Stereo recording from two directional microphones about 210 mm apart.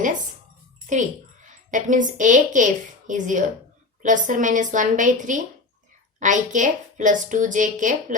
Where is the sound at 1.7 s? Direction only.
40° right (ahead or behind).